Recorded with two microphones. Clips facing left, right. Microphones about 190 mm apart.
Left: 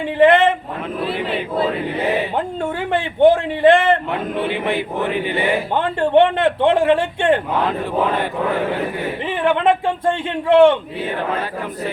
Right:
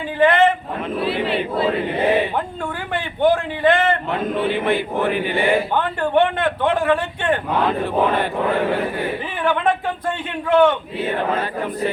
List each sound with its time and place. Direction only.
0.2 s a sound: 25° left (ahead or behind)
2.9 s a man's voice: 25° left (ahead or behind)
9.4 s speech: 25° left (ahead or behind)